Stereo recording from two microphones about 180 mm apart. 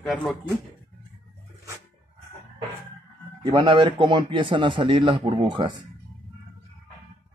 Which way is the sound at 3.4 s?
25° right (ahead or behind).